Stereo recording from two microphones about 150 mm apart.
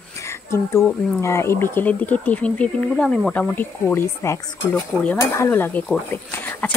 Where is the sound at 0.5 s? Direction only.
20° left (ahead or behind).